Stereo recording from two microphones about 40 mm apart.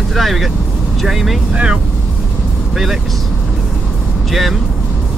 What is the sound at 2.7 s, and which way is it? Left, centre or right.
Speech, centre.